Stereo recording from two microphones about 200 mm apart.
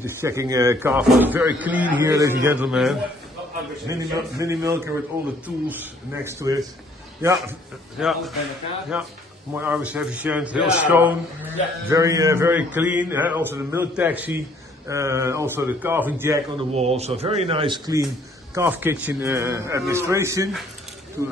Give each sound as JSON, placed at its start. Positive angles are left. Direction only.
{"t": 0.0, "sound": "a man's voice", "side_deg": -15}
{"t": 3.8, "sound": "a man's voice", "side_deg": -15}
{"t": 8.0, "sound": "a man's voice", "side_deg": 0}
{"t": 16.7, "sound": "a man's voice", "side_deg": -30}